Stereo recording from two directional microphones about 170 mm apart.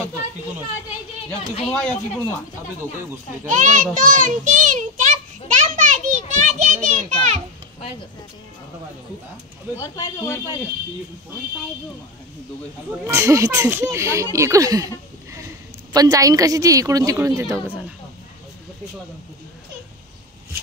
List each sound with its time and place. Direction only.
1.7 s speech: 5° left (ahead or behind)
3.4 s a sound: 45° right (ahead or behind)
9.8 s speech: 15° left (ahead or behind)
13.0 s a woman's voice: 15° right (ahead or behind)